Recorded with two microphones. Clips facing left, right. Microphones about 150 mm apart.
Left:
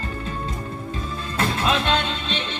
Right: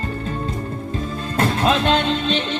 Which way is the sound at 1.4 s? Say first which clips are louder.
Right 4 dB; 45° right (ahead or behind).